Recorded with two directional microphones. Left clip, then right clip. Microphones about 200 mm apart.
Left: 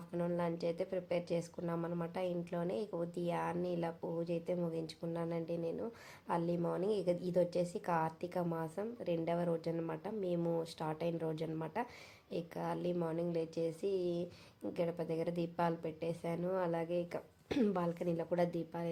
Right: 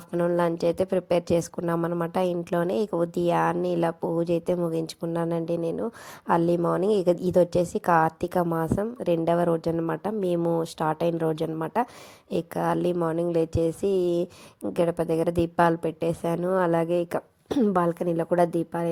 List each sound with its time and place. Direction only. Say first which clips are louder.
0.1 s a woman's voice: right 14 dB; 40° right (ahead or behind)